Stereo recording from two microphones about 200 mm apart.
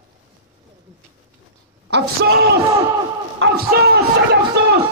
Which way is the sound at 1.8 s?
55° right (ahead or behind).